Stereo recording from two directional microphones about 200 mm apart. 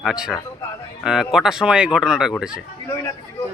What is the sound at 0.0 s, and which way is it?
A man's voice, 5° right (ahead or behind).